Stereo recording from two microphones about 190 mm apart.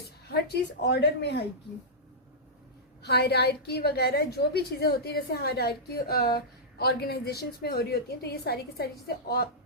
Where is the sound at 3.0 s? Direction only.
60° left (ahead or behind).